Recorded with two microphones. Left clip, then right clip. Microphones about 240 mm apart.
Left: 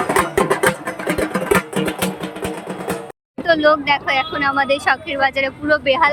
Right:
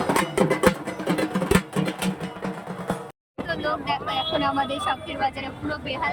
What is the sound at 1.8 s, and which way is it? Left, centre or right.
Music, left.